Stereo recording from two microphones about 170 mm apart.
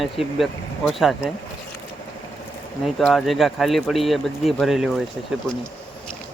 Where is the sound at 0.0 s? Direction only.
Centre (ahead or behind).